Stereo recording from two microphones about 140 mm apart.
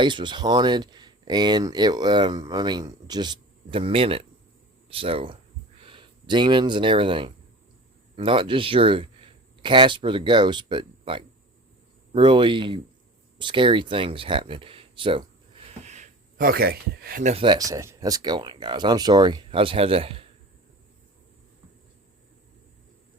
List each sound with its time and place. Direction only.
0.0 s speech: 35° right (ahead or behind)
15.8 s a sound: 55° right (ahead or behind)
16.4 s speech: 90° right
17.3 s speech: 35° right (ahead or behind)